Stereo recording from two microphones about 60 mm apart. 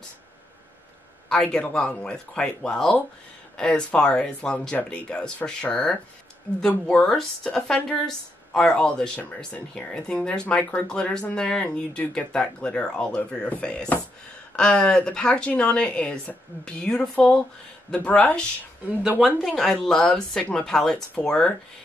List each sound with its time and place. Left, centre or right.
1.7 s a woman's voice: centre
19.0 s speech: centre
19.4 s a woman's voice: centre